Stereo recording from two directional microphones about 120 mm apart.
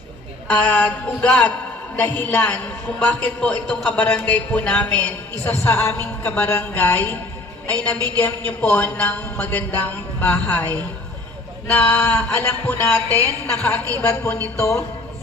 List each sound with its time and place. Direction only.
0.5 s a man's voice: 15° left (ahead or behind)
8.2 s a man's voice: 10° left (ahead or behind)